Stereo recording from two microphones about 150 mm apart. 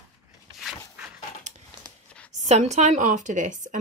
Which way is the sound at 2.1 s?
5° left (ahead or behind).